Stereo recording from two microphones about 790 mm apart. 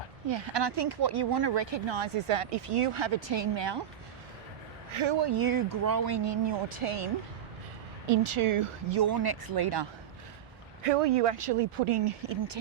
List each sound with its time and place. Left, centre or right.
0.3 s speech: right
4.9 s speech: right
10.8 s speech: right